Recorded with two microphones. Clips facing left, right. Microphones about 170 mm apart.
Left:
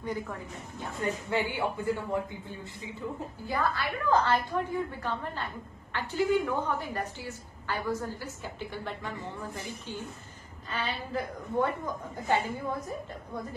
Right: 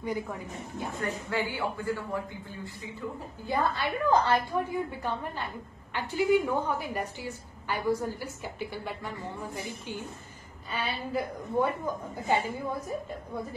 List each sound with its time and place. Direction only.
0.0 s a woman's voice: 10° right (ahead or behind)
1.3 s a man's voice: 20° left (ahead or behind)
3.4 s a woman's voice: 20° right (ahead or behind)